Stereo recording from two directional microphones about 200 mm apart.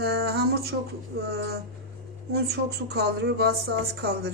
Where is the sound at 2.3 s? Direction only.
55° right (ahead or behind).